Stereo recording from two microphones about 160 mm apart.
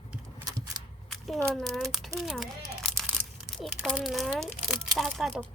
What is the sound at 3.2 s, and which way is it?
Crumpling, 60° right (ahead or behind).